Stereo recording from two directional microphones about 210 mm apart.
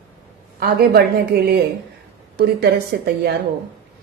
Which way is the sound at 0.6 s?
50° right (ahead or behind).